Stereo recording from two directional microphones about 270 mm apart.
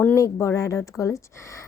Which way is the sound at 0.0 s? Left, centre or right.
Centre.